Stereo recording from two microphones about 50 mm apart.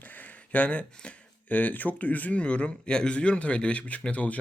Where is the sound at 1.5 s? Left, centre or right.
Left.